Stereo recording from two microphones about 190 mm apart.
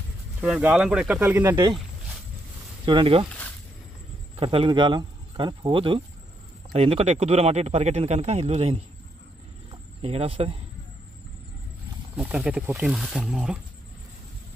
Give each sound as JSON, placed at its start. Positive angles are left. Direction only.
{"t": 0.4, "sound": "speech", "side_deg": -5}
{"t": 2.8, "sound": "speech", "side_deg": -25}
{"t": 4.4, "sound": "speech", "side_deg": -30}
{"t": 9.7, "sound": "cricket", "side_deg": -30}
{"t": 12.2, "sound": "speech", "side_deg": -5}